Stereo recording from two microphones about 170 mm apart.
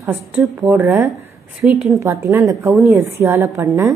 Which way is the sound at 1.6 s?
Centre (ahead or behind).